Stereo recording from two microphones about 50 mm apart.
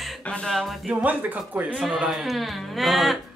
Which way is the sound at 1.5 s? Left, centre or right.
Right.